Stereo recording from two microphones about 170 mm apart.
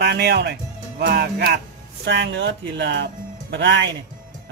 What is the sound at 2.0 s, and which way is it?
Speech, 90° right.